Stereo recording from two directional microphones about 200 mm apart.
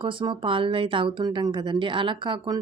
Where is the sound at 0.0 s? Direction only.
25° right (ahead or behind).